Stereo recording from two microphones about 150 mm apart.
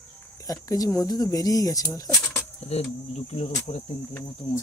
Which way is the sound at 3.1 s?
45° left (ahead or behind).